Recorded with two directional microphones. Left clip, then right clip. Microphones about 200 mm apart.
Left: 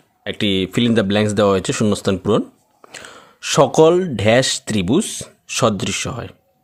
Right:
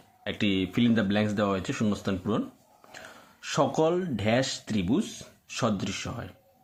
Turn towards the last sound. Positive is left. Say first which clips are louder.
# left 11 dB
turn(degrees=55)  # may be behind; listen again after turning